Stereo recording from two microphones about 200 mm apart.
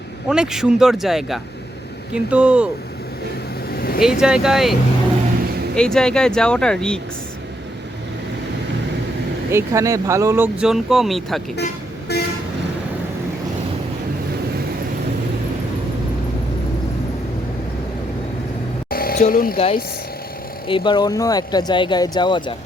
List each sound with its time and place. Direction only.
0.3 s speech: 5° right (ahead or behind)
3.7 s vehicle: 50° left (ahead or behind)
4.0 s speech: 5° right (ahead or behind)
9.5 s speech: 15° right (ahead or behind)
12.1 s toot: 55° left (ahead or behind)
18.9 s a sound: 50° left (ahead or behind)
19.5 s speech: 30° left (ahead or behind)